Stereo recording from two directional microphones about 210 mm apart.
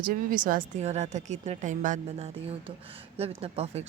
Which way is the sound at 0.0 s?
40° right (ahead or behind).